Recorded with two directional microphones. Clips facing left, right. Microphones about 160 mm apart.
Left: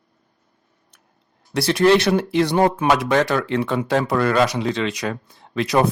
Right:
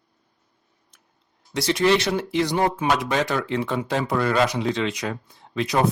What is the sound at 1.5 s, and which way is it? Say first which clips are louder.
Speech: left 4 dB; 60° left (ahead or behind).